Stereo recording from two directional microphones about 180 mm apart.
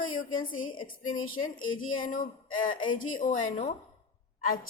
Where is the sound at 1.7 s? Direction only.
50° left (ahead or behind).